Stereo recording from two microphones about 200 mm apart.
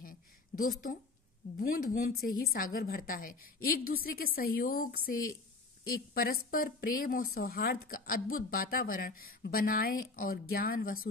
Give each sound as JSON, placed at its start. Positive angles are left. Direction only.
{"t": 0.6, "sound": "a woman's voice", "side_deg": 45}